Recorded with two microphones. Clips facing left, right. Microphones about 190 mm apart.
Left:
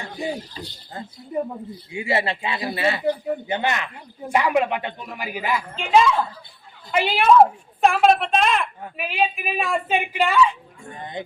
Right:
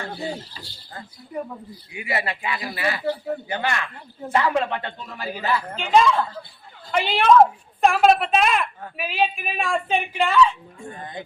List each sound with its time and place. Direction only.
0.0 s speech: 15° left (ahead or behind)
5.7 s speech: centre (ahead or behind)